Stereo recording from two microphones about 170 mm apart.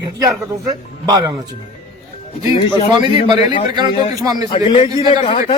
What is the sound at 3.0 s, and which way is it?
A man's voice, 25° right (ahead or behind).